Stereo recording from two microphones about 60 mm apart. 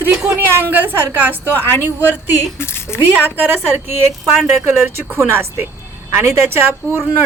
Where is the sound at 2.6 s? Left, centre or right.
Left.